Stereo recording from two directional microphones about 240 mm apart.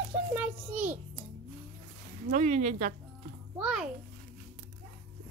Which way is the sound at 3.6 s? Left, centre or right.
Centre.